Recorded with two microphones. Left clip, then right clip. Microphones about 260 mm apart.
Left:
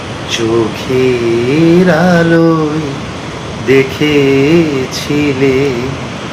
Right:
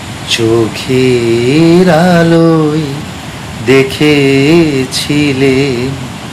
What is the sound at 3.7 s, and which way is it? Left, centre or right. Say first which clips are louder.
Mantra: right 2 dB; right.